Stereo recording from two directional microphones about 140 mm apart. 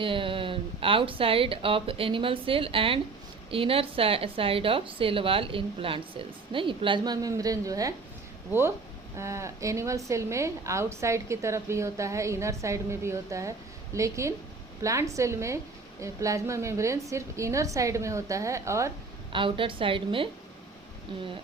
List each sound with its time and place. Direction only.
0.0 s a woman's voice: 40° right (ahead or behind)
9.1 s a woman's voice: 20° right (ahead or behind)
19.3 s a woman's voice: 35° right (ahead or behind)